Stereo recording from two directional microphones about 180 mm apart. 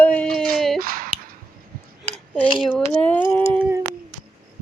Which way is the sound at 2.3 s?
10° left (ahead or behind).